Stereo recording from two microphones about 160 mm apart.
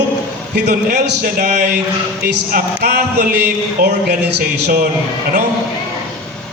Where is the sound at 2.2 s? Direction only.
75° right (ahead or behind).